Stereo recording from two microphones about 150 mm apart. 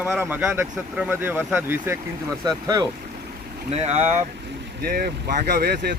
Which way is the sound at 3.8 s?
50° right (ahead or behind).